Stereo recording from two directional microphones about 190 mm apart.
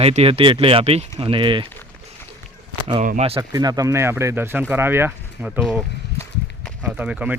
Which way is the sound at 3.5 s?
20° right (ahead or behind).